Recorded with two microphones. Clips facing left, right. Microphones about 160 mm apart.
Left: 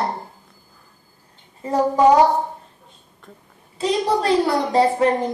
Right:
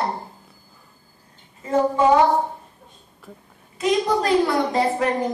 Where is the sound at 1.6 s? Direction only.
35° left (ahead or behind).